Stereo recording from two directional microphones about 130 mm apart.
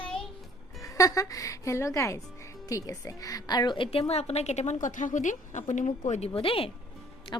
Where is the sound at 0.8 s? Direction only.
25° left (ahead or behind); by 4.7 s 60° left (ahead or behind).